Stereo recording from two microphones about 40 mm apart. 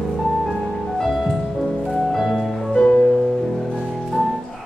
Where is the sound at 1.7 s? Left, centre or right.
Centre.